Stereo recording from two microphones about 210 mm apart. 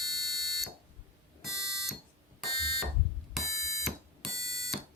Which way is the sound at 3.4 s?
35° left (ahead or behind).